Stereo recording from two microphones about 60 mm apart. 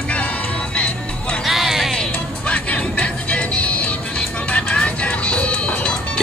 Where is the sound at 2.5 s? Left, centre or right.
Left.